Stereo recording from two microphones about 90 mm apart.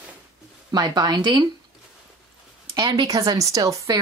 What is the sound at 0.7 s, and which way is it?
Speech, 50° right (ahead or behind).